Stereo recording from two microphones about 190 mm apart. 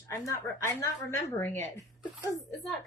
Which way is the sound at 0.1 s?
15° left (ahead or behind).